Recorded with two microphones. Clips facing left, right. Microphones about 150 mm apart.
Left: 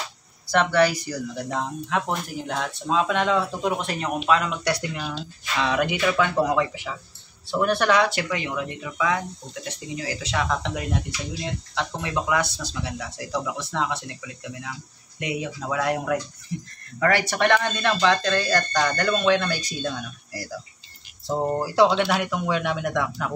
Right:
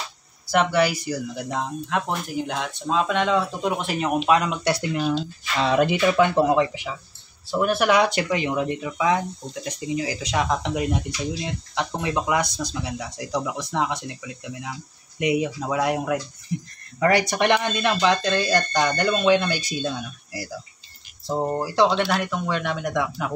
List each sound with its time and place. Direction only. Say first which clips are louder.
0.5 s speech: even; 10° right (ahead or behind)
4.3 s speech: even; 20° right (ahead or behind)
7.5 s speech: right 1 dB; 5° right (ahead or behind)
21.3 s speech: even; centre (ahead or behind)